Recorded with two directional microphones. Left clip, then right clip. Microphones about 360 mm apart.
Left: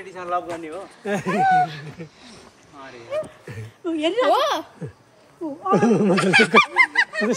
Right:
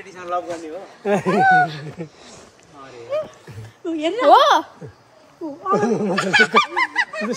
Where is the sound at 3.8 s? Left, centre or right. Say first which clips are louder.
Even; left.